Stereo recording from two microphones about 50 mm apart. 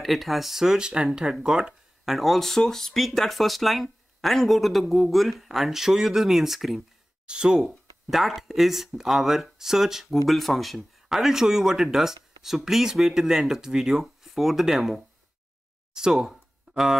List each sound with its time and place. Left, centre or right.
0.0 s speech: centre
7.2 s speech: centre
7.6 s speech: centre
10.2 s speech: centre
16.3 s a sound: centre